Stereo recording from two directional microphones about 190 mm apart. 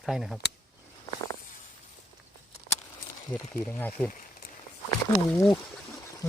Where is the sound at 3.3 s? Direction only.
10° left (ahead or behind).